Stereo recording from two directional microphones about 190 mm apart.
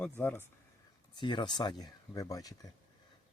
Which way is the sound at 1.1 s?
25° left (ahead or behind).